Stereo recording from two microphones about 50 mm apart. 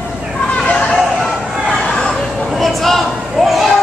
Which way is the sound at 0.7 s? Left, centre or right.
Centre.